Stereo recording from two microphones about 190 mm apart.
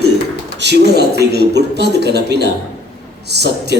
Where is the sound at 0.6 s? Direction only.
60° right (ahead or behind).